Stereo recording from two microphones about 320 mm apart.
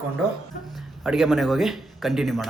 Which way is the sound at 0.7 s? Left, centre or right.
Centre.